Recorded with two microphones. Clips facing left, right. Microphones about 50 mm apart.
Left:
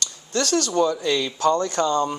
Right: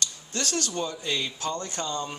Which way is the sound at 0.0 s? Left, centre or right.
Left.